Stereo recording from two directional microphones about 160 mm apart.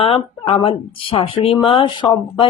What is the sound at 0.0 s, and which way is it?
Speech, 35° left (ahead or behind).